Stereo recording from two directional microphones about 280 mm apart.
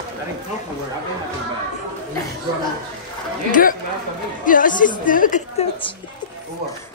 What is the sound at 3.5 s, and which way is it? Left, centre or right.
A woman's voice, left.